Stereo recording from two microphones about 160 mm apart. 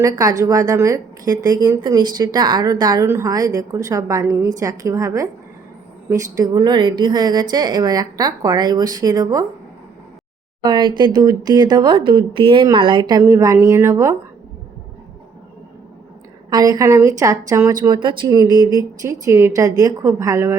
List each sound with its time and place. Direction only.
0.0 s a woman's voice: 20° right (ahead or behind)
10.6 s a woman's voice: 30° right (ahead or behind)
16.5 s a woman's voice: 25° right (ahead or behind)